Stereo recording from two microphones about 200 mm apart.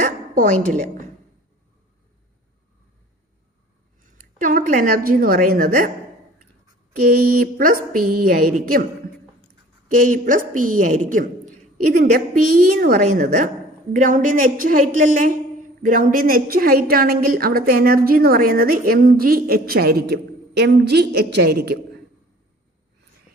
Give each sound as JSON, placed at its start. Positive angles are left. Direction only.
{"t": 0.0, "sound": "a woman's voice", "side_deg": -45}
{"t": 4.2, "sound": "a woman's voice", "side_deg": -45}
{"t": 7.1, "sound": "a woman's voice", "side_deg": -50}
{"t": 10.1, "sound": "a woman's voice", "side_deg": -40}